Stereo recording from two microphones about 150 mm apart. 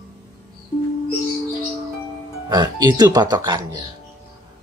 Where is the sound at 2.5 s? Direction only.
30° right (ahead or behind).